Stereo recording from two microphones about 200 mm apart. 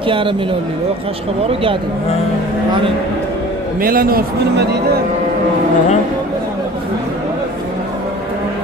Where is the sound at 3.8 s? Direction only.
45° right (ahead or behind).